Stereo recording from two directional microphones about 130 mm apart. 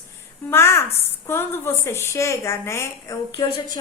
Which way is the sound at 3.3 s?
45° left (ahead or behind).